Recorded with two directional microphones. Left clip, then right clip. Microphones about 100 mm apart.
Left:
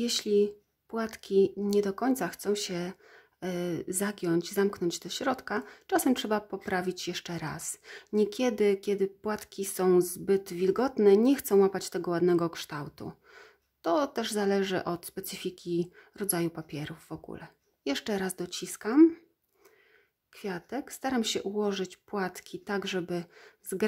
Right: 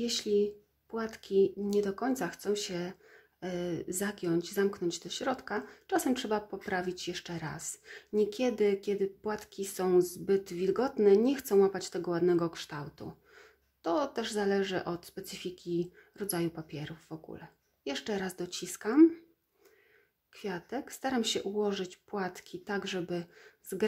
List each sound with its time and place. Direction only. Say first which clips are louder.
0.0 s speech: left 3 dB; 50° left (ahead or behind)
20.3 s speech: left 2 dB; 35° left (ahead or behind)